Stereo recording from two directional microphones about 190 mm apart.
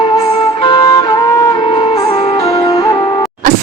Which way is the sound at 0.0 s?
30° left (ahead or behind).